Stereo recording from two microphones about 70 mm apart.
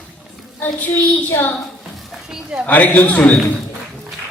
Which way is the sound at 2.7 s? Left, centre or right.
Left.